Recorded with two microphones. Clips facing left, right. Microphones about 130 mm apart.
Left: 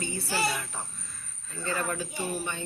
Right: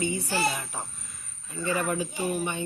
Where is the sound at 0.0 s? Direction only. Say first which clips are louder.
Right 3 dB; 15° right (ahead or behind).